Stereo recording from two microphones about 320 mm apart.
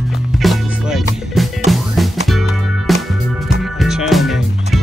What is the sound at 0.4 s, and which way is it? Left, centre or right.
Music, centre.